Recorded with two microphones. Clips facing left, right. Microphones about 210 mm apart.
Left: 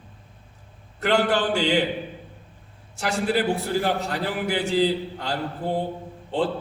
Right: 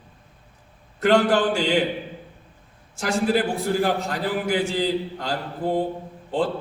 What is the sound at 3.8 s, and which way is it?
A man's voice, 40° right (ahead or behind).